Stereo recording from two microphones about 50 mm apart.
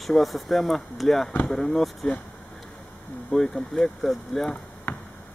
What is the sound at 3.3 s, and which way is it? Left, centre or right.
Speech, centre.